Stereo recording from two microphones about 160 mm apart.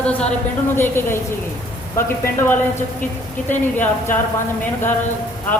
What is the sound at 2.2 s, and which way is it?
Speech, 15° left (ahead or behind).